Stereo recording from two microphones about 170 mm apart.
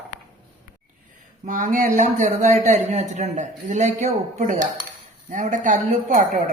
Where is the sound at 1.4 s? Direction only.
50° right (ahead or behind).